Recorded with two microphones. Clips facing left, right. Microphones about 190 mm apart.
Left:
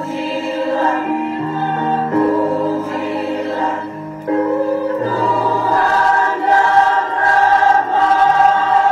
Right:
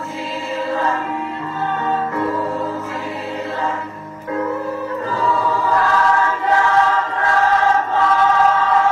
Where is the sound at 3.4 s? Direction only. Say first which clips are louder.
Left 4 dB; 35° left (ahead or behind).